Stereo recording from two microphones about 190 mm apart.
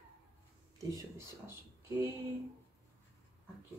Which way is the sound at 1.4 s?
10° right (ahead or behind).